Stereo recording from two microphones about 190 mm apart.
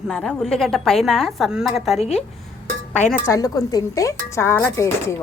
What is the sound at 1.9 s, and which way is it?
Speech, 35° left (ahead or behind).